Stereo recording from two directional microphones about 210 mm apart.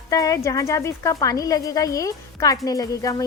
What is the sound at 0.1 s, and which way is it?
Speech, 15° left (ahead or behind).